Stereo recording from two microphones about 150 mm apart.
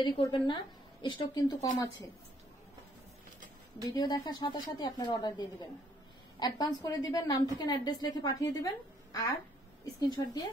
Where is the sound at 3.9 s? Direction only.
25° left (ahead or behind).